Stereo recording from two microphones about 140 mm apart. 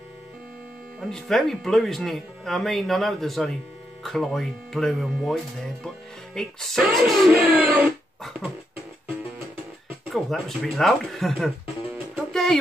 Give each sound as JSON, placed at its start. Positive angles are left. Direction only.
{"t": 1.0, "sound": "speech", "side_deg": 0}
{"t": 7.4, "sound": "a sound", "side_deg": -10}
{"t": 8.2, "sound": "beatboxing", "side_deg": 0}
{"t": 10.1, "sound": "speech", "side_deg": 0}
{"t": 12.3, "sound": "music", "side_deg": 5}